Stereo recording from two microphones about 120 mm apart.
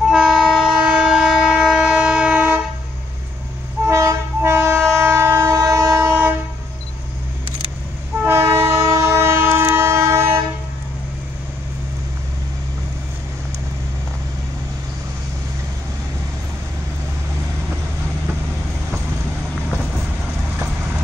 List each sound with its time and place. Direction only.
0.0 s train: 5° right (ahead or behind)
3.8 s train: 20° right (ahead or behind)
8.3 s train: 20° right (ahead or behind)